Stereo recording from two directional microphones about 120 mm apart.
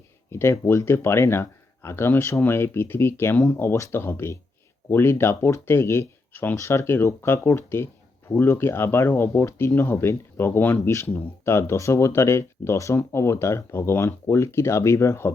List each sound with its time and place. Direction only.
0.3 s speech: 20° left (ahead or behind)